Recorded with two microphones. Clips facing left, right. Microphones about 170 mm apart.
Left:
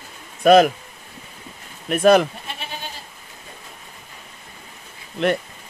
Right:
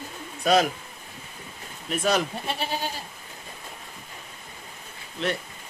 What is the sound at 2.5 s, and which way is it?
Goat, 35° right (ahead or behind).